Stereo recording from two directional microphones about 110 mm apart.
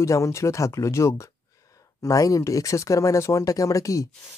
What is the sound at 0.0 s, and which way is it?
Speech, 25° left (ahead or behind).